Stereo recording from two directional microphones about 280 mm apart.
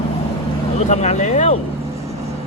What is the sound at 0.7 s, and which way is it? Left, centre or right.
Speech, left.